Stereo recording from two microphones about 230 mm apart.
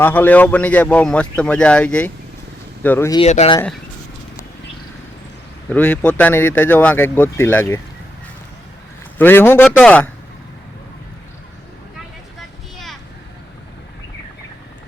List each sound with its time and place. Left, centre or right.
0.0 s speech: centre
3.2 s speech: left
5.6 s speech: centre
9.1 s speech: centre
12.7 s a sound: centre